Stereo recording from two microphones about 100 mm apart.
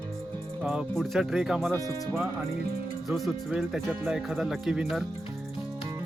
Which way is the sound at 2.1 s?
20° right (ahead or behind).